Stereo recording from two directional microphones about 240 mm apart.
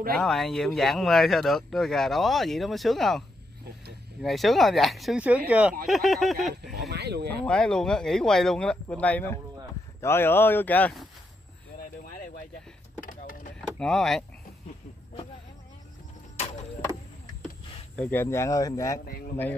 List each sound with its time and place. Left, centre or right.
0.1 s speech: centre
6.7 s speech: right
7.4 s speech: centre
13.0 s a sound: left
13.7 s speech: centre
17.9 s speech: centre